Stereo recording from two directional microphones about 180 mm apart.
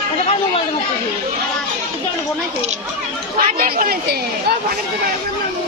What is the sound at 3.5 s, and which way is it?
Speech, 50° right (ahead or behind).